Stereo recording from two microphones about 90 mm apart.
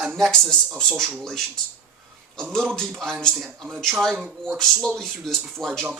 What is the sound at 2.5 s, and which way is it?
Speech, 5° left (ahead or behind).